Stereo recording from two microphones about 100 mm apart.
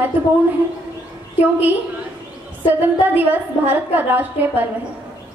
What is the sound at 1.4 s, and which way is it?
Speech, 20° right (ahead or behind).